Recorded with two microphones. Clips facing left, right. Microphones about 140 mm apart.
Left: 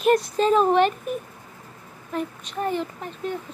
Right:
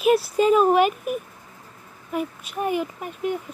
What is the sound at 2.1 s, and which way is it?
A woman's voice, 10° right (ahead or behind).